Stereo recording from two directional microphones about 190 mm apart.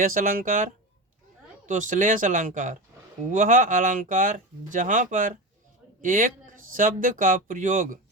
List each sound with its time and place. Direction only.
0.0 s speech: 45° right (ahead or behind)